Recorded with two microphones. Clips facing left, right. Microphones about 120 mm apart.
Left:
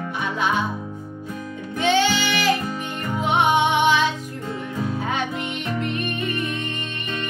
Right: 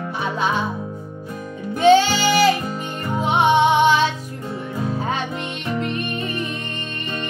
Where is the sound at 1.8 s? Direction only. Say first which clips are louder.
Right 6 dB; 40° right (ahead or behind).